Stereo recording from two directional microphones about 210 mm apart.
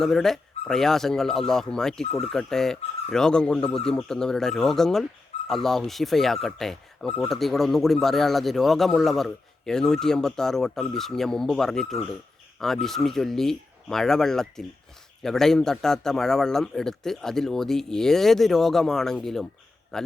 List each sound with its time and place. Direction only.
0.0 s a man's voice: centre (ahead or behind)